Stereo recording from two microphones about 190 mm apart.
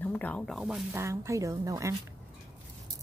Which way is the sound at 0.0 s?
10° left (ahead or behind).